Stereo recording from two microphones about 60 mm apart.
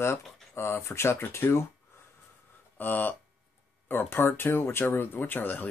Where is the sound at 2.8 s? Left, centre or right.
Left.